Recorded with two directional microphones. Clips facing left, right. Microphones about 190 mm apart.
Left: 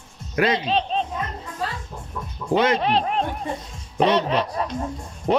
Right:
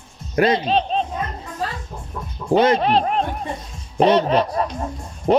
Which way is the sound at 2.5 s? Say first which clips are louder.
Right 4 dB; 40° right (ahead or behind).